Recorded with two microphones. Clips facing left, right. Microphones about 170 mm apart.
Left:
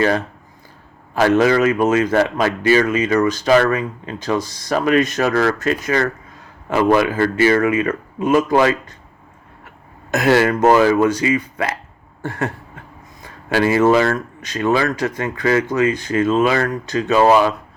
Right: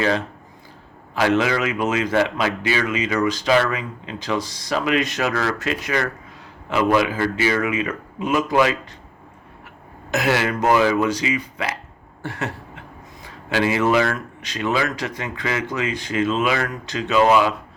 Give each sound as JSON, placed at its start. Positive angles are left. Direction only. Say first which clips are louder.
{"t": 1.1, "sound": "a man's voice", "louder": "left 5 dB", "side_deg": 45}
{"t": 10.1, "sound": "a man's voice", "louder": "left 6 dB", "side_deg": 50}
{"t": 12.2, "sound": "a sound", "louder": "left 5 dB", "side_deg": 50}
{"t": 13.5, "sound": "a man's voice", "louder": "left 5 dB", "side_deg": 45}